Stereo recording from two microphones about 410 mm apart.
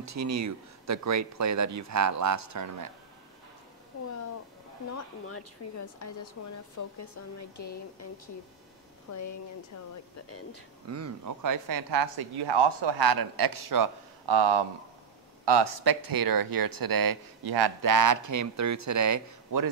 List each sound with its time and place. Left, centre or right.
0.0 s speech: right
5.3 s speech: left
10.9 s speech: right